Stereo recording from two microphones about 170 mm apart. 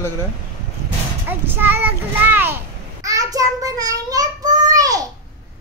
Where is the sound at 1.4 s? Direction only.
10° right (ahead or behind).